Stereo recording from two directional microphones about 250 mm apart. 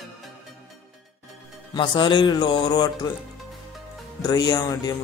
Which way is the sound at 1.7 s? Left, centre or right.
Centre.